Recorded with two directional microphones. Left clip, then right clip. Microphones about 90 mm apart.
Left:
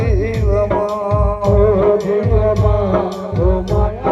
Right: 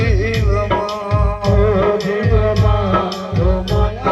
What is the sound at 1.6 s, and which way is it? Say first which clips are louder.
Music: left 2 dB; 55° left (ahead or behind).